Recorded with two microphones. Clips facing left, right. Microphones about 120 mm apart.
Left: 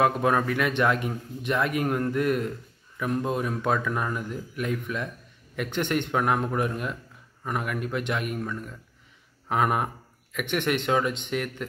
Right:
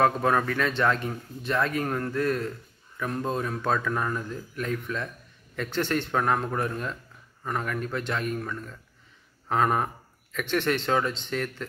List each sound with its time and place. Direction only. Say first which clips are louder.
0.0 s a man's voice: even; 15° left (ahead or behind)